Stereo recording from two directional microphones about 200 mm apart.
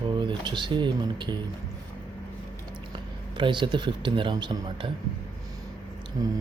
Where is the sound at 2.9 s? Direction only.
25° right (ahead or behind).